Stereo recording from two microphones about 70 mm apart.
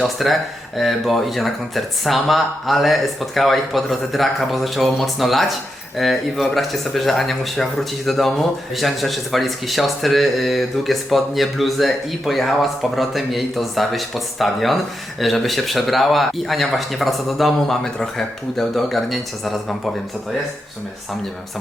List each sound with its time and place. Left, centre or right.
0.2 s speech: centre